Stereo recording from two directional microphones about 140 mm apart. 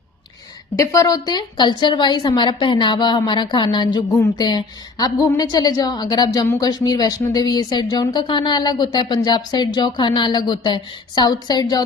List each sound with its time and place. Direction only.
0.8 s a woman's voice: 25° left (ahead or behind)